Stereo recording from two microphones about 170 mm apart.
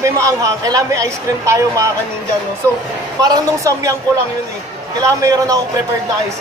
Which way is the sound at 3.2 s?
20° right (ahead or behind).